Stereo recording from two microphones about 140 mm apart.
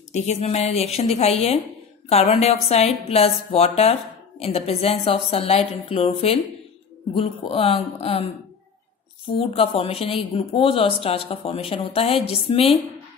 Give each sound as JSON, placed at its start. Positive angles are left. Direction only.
{"t": 0.1, "sound": "a woman's voice", "side_deg": 55}
{"t": 9.4, "sound": "a woman's voice", "side_deg": 40}